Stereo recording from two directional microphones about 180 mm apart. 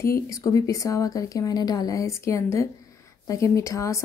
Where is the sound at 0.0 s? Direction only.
15° left (ahead or behind).